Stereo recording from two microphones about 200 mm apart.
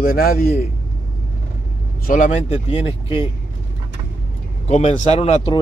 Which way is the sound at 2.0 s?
40° left (ahead or behind).